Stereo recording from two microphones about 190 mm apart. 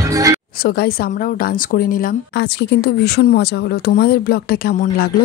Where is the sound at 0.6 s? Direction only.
50° left (ahead or behind).